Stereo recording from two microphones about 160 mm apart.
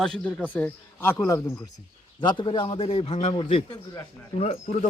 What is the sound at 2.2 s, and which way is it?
A man's voice, 30° left (ahead or behind).